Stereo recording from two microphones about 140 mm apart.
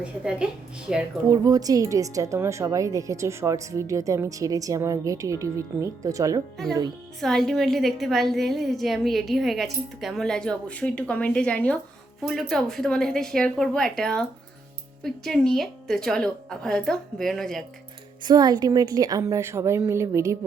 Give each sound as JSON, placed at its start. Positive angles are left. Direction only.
{"t": 0.0, "sound": "a woman's voice", "side_deg": -5}
{"t": 1.3, "sound": "a woman's voice", "side_deg": -25}
{"t": 7.2, "sound": "a woman's voice", "side_deg": 0}
{"t": 18.2, "sound": "a woman's voice", "side_deg": -30}